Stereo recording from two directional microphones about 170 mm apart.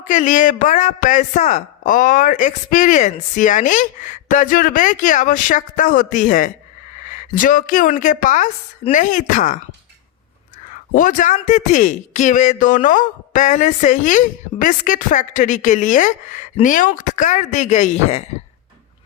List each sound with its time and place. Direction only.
0.0 s speech: 50° left (ahead or behind)
10.9 s speech: 50° left (ahead or behind)